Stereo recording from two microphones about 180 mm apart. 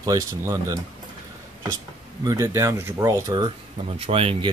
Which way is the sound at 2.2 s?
15° right (ahead or behind).